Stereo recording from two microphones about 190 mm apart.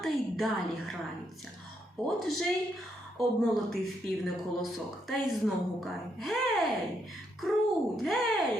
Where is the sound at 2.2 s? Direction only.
Centre (ahead or behind).